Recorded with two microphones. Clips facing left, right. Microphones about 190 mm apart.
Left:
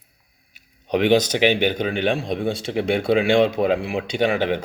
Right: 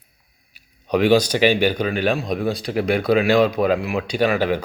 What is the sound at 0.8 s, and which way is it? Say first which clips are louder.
Speech: right 1 dB; 20° left (ahead or behind).